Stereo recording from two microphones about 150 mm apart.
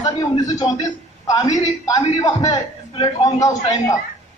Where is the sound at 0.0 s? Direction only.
25° left (ahead or behind).